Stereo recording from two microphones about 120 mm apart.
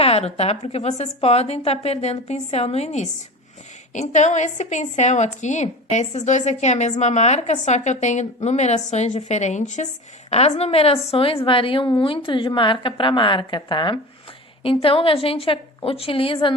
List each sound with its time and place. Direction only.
0.0 s a woman's voice: 55° left (ahead or behind)
3.9 s a woman's voice: 75° left (ahead or behind); by 16.6 s 45° left (ahead or behind)